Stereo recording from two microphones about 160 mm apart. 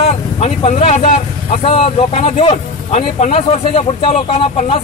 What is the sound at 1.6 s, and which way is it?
Speech, 40° left (ahead or behind).